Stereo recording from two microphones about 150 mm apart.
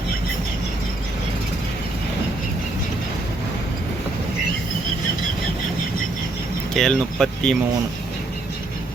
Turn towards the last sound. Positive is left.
turn(degrees=5)  # may be behind; listen again after turning